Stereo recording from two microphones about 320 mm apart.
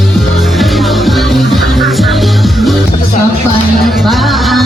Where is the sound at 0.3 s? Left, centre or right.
Centre.